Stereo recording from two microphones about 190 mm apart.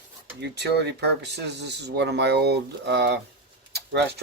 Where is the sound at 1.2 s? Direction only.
60° right (ahead or behind).